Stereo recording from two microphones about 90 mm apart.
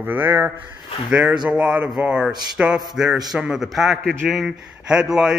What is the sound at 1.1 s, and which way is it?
Speech, 10° right (ahead or behind).